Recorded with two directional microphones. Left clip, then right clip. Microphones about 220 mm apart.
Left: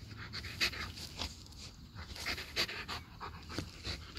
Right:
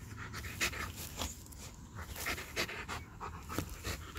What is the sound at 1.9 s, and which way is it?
Dog, 5° right (ahead or behind).